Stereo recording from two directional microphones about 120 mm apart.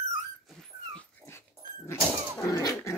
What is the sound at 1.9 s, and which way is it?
Dog, 25° left (ahead or behind).